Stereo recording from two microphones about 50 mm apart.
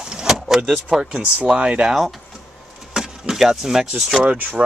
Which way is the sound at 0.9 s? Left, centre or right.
Centre.